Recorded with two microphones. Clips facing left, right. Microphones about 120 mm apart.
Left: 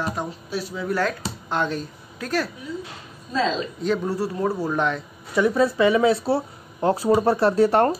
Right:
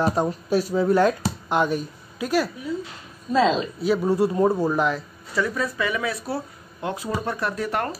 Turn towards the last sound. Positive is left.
turn(degrees=30)  # may be behind; listen again after turning